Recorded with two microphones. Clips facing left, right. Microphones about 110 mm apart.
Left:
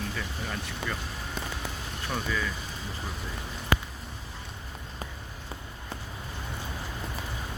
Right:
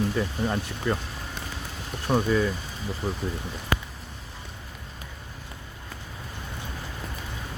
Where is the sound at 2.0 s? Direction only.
40° right (ahead or behind).